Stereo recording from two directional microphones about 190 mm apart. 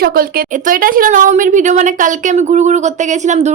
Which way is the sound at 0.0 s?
50° right (ahead or behind).